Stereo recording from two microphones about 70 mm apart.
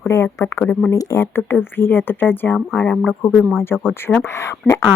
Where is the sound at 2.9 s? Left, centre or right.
Centre.